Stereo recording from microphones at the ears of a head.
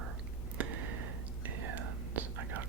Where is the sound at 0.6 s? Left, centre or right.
Right.